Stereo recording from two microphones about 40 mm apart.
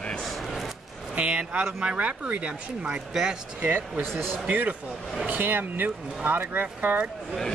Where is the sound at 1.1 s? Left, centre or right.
Right.